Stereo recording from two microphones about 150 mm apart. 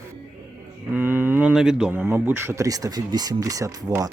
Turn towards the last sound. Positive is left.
turn(degrees=-25)  # may be behind; listen again after turning